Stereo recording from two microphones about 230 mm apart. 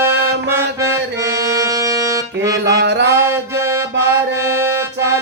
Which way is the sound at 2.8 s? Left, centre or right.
Right.